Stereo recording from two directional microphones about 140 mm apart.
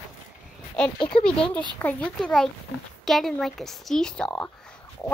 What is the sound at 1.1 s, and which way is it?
Speech, 45° left (ahead or behind).